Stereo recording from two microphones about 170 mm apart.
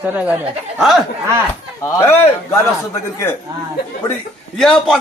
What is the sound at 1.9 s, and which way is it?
Speech, 15° left (ahead or behind).